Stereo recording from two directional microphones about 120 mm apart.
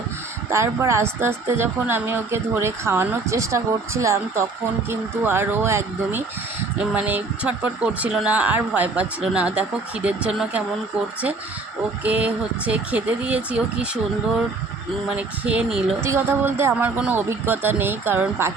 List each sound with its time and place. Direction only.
0.5 s a woman's voice: 25° right (ahead or behind); by 10.6 s 5° right (ahead or behind)
12.0 s speech: 10° right (ahead or behind)
15.1 s a woman's voice: 10° right (ahead or behind)